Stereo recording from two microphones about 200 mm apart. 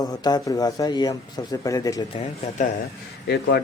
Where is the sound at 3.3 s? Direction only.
55° left (ahead or behind).